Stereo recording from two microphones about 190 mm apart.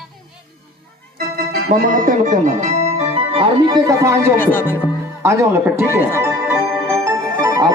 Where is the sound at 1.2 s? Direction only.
50° right (ahead or behind); by 4.4 s 15° right (ahead or behind).